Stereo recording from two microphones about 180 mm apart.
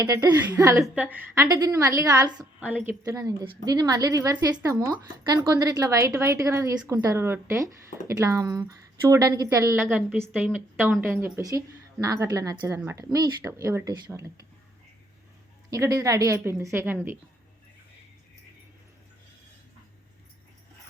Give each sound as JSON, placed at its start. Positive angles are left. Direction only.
{"t": 0.0, "sound": "speech", "side_deg": -20}
{"t": 1.5, "sound": "speech", "side_deg": -20}
{"t": 2.6, "sound": "speech", "side_deg": -10}
{"t": 3.0, "sound": "speech", "side_deg": -20}
{"t": 15.7, "sound": "speech", "side_deg": -20}